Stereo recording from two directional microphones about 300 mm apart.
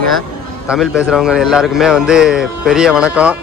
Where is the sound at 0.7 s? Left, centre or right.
Centre.